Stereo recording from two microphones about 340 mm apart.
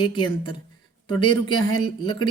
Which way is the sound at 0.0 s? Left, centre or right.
Centre.